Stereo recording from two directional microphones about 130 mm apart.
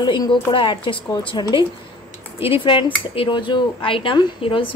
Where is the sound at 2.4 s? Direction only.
40° left (ahead or behind).